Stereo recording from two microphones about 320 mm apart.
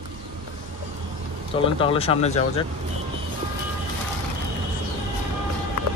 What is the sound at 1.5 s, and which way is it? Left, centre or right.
Speech, centre.